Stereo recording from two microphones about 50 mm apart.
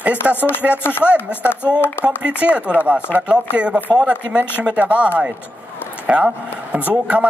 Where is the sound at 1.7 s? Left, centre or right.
Left.